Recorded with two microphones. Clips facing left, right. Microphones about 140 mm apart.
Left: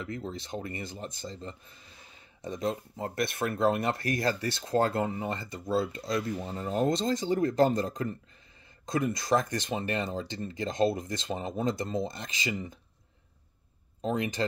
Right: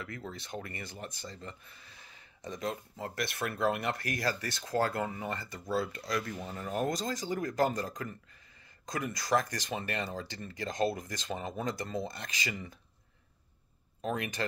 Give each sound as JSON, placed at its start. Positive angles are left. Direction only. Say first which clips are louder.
{"t": 0.0, "sound": "speech", "louder": "left 5 dB", "side_deg": 25}
{"t": 14.0, "sound": "speech", "louder": "left 4 dB", "side_deg": 25}